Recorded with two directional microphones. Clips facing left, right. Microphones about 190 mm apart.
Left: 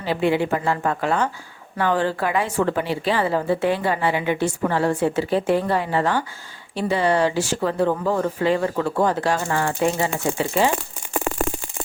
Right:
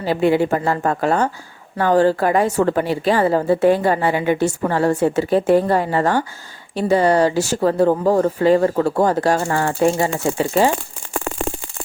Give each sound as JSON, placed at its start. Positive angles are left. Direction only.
{"t": 0.0, "sound": "a woman's voice", "side_deg": -40}